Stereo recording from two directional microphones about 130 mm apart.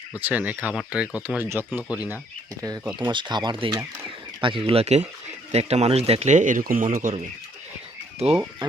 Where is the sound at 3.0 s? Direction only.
35° right (ahead or behind); by 7.1 s 90° right.